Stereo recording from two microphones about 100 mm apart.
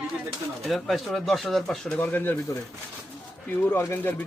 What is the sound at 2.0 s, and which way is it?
Speech, 20° left (ahead or behind).